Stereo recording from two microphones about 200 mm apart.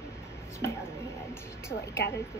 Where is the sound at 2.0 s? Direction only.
55° left (ahead or behind).